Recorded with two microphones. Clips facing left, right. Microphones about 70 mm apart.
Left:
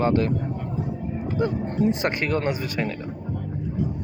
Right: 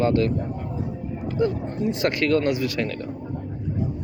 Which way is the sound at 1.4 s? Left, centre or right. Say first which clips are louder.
Left 1 dB; left.